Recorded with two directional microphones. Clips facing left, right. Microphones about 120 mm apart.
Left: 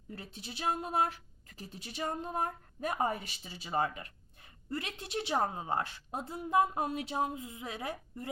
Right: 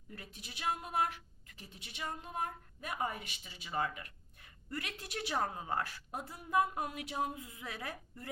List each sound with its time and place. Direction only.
0.1 s speech: 30° left (ahead or behind)